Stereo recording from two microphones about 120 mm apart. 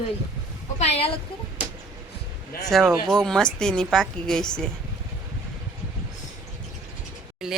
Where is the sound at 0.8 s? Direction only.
55° left (ahead or behind).